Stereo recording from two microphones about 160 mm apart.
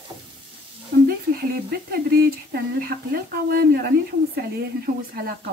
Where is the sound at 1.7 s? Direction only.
70° right (ahead or behind).